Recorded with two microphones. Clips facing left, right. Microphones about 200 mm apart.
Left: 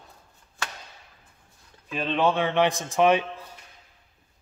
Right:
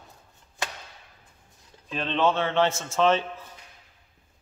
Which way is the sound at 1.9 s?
10° left (ahead or behind).